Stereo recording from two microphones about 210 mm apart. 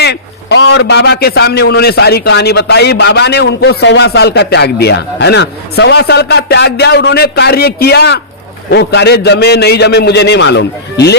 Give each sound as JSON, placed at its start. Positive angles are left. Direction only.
{"t": 0.0, "sound": "a man's voice", "side_deg": 55}